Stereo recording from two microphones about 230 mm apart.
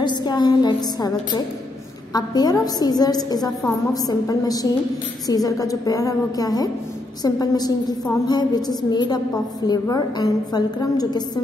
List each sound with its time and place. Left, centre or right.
0.0 s a woman's voice: centre